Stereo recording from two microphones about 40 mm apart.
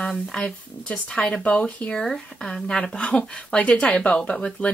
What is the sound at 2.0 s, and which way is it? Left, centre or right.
Speech, centre.